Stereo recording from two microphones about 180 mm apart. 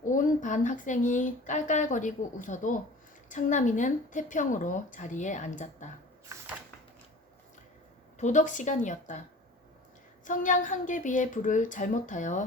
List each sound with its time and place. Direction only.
0.0 s speech: 45° left (ahead or behind)
6.3 s a sound: 15° right (ahead or behind)
8.2 s speech: 45° left (ahead or behind)
10.2 s speech: 45° left (ahead or behind)